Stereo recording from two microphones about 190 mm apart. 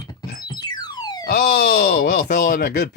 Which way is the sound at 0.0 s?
20° left (ahead or behind).